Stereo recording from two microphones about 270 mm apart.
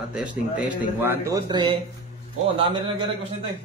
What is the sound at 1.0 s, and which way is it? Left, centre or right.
Speech, centre.